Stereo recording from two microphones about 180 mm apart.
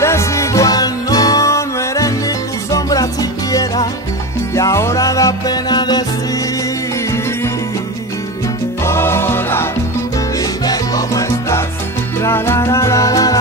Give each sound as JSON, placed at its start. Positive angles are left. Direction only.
{"t": 0.0, "sound": "music", "side_deg": 15}
{"t": 8.8, "sound": "music", "side_deg": 15}
{"t": 10.6, "sound": "salsa music", "side_deg": 20}
{"t": 12.2, "sound": "music", "side_deg": 15}